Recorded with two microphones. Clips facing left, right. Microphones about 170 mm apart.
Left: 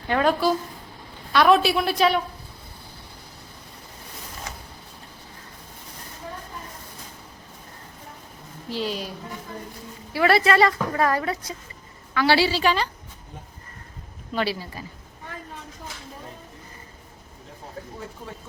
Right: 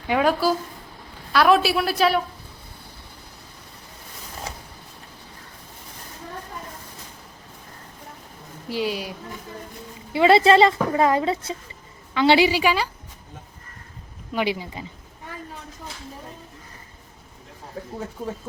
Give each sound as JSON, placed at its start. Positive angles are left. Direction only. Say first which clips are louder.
{"t": 0.1, "sound": "a woman's voice", "louder": "right 1 dB", "side_deg": -5}
{"t": 4.5, "sound": "a sound", "louder": "right 3 dB", "side_deg": -30}
{"t": 8.7, "sound": "a woman's voice", "louder": "right 2 dB", "side_deg": -10}
{"t": 10.1, "sound": "a woman's voice", "louder": "right 4 dB", "side_deg": -20}
{"t": 14.3, "sound": "a woman's voice", "louder": "right 2 dB", "side_deg": -15}